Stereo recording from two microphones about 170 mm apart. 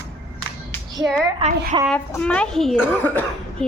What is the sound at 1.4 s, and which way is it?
Speech, 35° right (ahead or behind).